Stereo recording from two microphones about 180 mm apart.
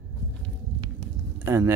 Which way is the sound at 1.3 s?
15° right (ahead or behind).